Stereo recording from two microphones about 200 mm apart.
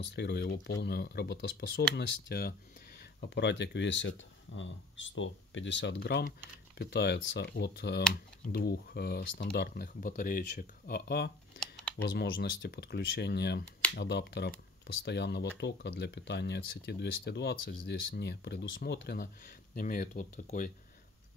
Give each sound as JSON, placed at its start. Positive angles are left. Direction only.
{"t": 0.0, "sound": "speech", "side_deg": 55}
{"t": 11.6, "sound": "typing", "side_deg": 0}
{"t": 12.0, "sound": "speech", "side_deg": 50}